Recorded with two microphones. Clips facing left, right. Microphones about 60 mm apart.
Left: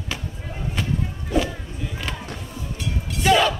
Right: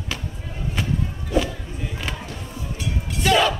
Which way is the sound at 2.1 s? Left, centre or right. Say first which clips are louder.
Right 1 dB; centre.